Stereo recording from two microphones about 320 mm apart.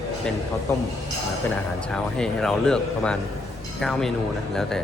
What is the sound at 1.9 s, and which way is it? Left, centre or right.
Speech, centre.